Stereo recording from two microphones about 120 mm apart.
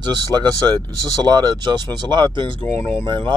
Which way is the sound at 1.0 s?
35° right (ahead or behind).